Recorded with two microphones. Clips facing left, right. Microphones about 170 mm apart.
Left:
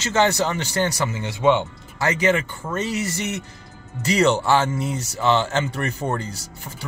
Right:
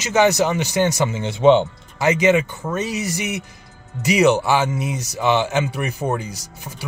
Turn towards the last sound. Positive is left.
turn(degrees=-15)  # may be behind; listen again after turning